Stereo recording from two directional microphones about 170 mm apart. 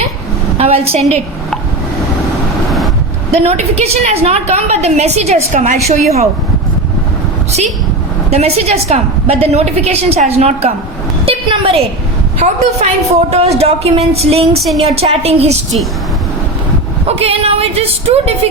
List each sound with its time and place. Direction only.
0.9 s a woman's voice: 40° right (ahead or behind)
3.3 s a woman's voice: 40° right (ahead or behind)
8.3 s a woman's voice: 40° right (ahead or behind)
11.3 s a sound: 35° right (ahead or behind)
12.4 s a woman's voice: 40° right (ahead or behind)
14.6 s a woman's voice: centre (ahead or behind)
14.9 s a woman's voice: 35° right (ahead or behind)
17.1 s a woman's voice: 35° right (ahead or behind)